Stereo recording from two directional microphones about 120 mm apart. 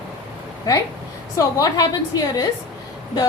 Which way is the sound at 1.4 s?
30° left (ahead or behind).